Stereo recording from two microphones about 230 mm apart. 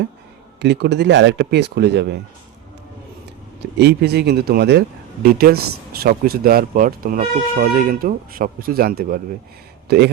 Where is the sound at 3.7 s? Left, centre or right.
Right.